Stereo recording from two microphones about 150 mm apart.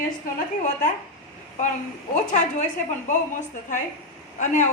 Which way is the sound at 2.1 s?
55° left (ahead or behind).